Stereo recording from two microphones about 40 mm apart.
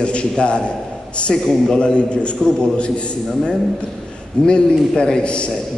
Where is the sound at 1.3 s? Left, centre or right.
Centre.